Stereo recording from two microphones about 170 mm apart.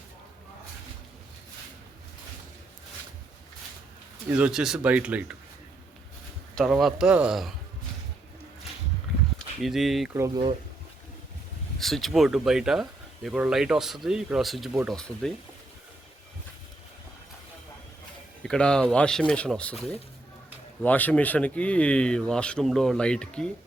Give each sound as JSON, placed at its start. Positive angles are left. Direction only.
{"t": 4.3, "sound": "speech", "side_deg": -10}
{"t": 6.6, "sound": "speech", "side_deg": 0}
{"t": 9.6, "sound": "speech", "side_deg": 0}
{"t": 10.2, "sound": "speech", "side_deg": -20}
{"t": 11.8, "sound": "speech", "side_deg": 0}
{"t": 18.4, "sound": "speech", "side_deg": 5}
{"t": 20.8, "sound": "speech", "side_deg": 10}